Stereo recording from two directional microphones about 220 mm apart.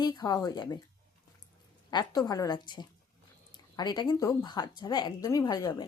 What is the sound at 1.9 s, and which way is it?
Speech, 20° left (ahead or behind).